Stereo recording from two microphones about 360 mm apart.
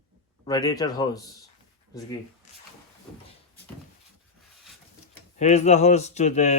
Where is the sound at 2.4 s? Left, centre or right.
Centre.